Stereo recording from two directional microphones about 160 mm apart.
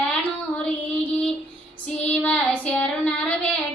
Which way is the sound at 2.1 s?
10° left (ahead or behind).